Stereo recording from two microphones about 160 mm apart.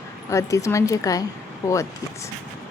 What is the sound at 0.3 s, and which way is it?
Speech, 20° left (ahead or behind).